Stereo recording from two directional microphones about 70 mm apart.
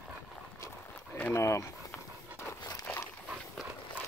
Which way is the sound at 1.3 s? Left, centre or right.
Left.